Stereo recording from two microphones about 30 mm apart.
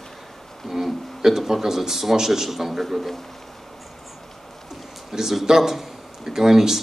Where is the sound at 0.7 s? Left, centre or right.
Centre.